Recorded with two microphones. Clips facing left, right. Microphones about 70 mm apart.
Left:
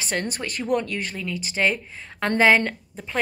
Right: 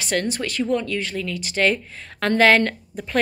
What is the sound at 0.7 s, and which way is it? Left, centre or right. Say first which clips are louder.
Speech: left 2 dB; left.